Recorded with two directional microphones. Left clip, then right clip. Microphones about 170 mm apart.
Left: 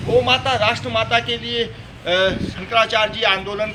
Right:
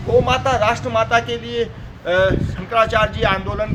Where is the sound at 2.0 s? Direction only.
15° right (ahead or behind).